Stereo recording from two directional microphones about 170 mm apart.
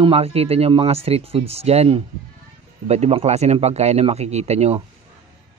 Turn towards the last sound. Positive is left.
turn(degrees=-40)  # may be behind; listen again after turning